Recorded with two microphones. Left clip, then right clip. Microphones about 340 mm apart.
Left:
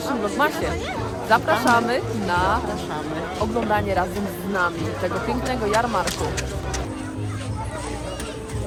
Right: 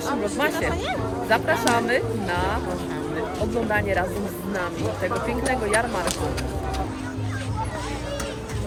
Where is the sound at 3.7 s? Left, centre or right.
Centre.